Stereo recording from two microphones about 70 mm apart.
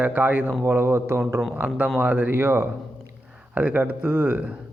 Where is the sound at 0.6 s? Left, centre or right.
Right.